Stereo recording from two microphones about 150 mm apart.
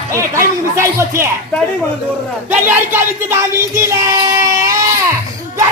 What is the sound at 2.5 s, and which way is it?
Music, 15° right (ahead or behind).